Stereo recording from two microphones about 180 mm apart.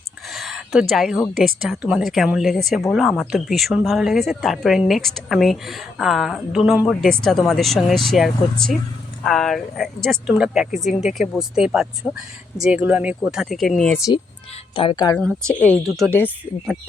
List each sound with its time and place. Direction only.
0.3 s a sound: centre (ahead or behind)
1.2 s speech: centre (ahead or behind)
14.8 s a woman's voice: 25° left (ahead or behind)
15.4 s speech: 5° left (ahead or behind)